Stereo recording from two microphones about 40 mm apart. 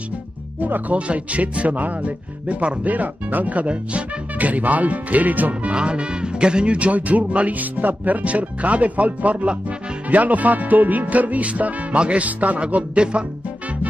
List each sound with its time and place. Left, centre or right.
0.6 s speech: right
0.9 s speech: right
12.7 s music: right